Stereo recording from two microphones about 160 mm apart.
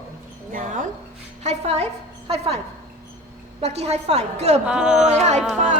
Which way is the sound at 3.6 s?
40° right (ahead or behind).